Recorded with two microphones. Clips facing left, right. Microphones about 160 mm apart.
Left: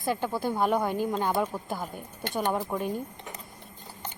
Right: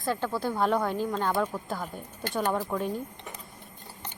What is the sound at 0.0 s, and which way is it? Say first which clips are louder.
Speech: left 1 dB; 15° left (ahead or behind).